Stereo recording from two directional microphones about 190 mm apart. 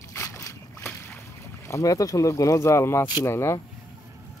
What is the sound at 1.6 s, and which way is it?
Speech, 15° left (ahead or behind).